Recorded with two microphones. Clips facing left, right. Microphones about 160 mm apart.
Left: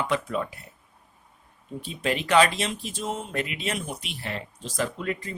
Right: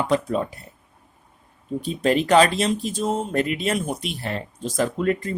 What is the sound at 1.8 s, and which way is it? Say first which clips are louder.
Speech: right 7 dB; 40° right (ahead or behind).